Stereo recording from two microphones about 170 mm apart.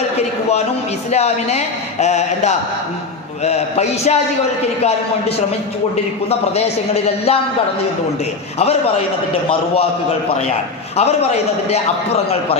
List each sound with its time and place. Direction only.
1.1 s speech: 40° left (ahead or behind)
6.6 s speech: 35° left (ahead or behind)
10.9 s speech: 35° left (ahead or behind)